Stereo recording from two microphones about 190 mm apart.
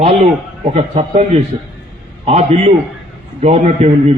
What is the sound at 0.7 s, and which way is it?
A man's voice, 35° right (ahead or behind).